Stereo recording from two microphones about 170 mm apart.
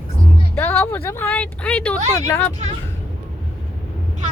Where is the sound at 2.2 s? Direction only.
20° left (ahead or behind).